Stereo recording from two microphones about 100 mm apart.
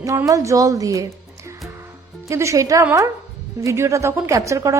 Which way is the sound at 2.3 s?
30° right (ahead or behind).